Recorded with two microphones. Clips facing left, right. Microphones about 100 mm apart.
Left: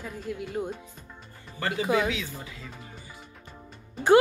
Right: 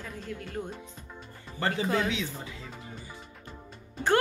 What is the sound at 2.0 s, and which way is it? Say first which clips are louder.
Speech: left 1 dB; 25° right (ahead or behind).